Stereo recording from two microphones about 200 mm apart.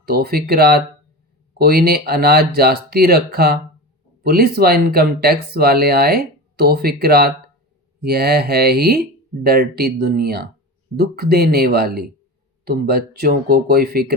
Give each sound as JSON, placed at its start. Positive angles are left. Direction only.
{"t": 0.0, "sound": "speech", "side_deg": -50}